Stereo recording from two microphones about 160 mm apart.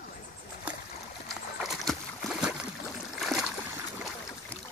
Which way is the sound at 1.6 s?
Centre (ahead or behind).